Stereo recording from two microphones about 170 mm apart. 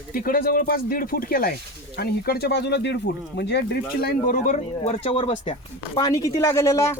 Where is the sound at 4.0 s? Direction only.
60° left (ahead or behind).